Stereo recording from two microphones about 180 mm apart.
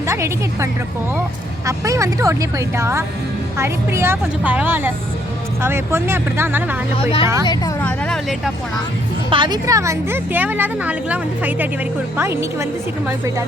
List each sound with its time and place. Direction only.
0.1 s a woman's voice: 15° right (ahead or behind)
6.9 s speech: 30° left (ahead or behind)
7.8 s vehicle: 5° left (ahead or behind)
9.3 s a woman's voice: 25° right (ahead or behind)